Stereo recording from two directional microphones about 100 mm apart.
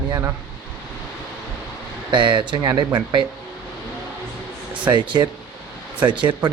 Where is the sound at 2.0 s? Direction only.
50° right (ahead or behind).